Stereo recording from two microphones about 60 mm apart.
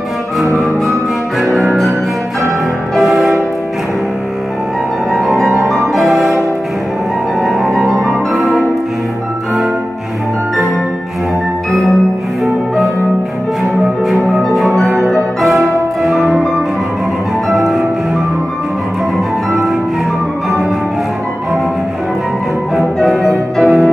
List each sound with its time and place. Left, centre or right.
1.4 s music: centre
3.0 s music: centre
5.1 s music: centre
7.4 s music: centre
14.2 s music: centre
22.8 s music: centre